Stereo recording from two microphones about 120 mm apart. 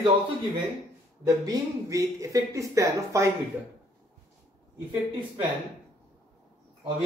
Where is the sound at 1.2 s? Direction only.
30° right (ahead or behind).